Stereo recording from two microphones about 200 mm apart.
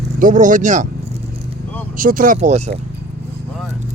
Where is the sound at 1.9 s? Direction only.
45° right (ahead or behind).